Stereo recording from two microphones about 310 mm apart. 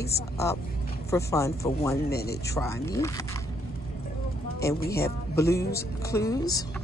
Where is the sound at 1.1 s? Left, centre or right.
Centre.